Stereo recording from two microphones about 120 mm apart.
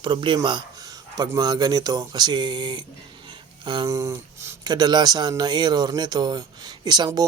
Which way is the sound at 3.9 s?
25° right (ahead or behind).